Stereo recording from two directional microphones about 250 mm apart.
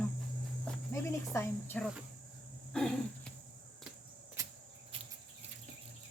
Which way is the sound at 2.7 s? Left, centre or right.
Centre.